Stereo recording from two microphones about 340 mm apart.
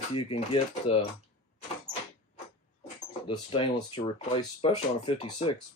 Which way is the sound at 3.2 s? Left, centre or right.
Centre.